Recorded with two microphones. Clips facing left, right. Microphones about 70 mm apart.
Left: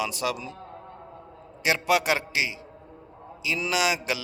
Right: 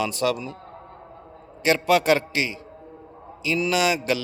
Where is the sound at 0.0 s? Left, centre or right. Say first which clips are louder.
Right 5 dB; centre.